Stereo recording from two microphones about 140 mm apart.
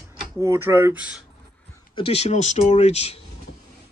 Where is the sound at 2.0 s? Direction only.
50° left (ahead or behind).